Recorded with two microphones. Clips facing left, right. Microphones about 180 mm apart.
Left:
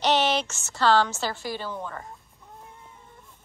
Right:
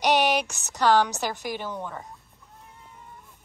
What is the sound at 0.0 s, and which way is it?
A woman's voice, 15° right (ahead or behind).